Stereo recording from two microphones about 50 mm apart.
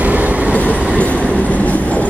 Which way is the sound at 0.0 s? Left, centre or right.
Right.